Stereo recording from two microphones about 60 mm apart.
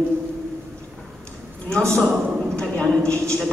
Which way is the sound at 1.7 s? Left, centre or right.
Centre.